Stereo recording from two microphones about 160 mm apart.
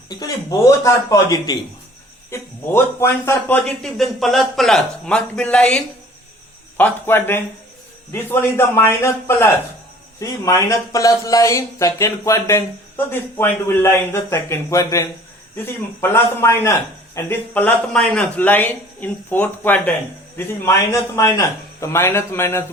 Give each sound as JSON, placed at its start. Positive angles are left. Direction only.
{"t": 0.1, "sound": "a man's voice", "side_deg": 20}
{"t": 3.6, "sound": "a man's voice", "side_deg": 0}